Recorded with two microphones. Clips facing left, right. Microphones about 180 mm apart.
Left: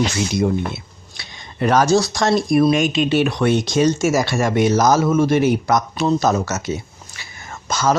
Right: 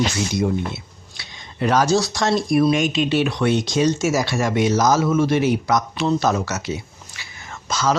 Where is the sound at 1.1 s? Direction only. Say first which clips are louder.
Left 2 dB; 50° left (ahead or behind).